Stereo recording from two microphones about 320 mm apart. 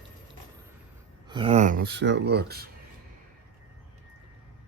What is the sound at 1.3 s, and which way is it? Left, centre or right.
Speech, centre.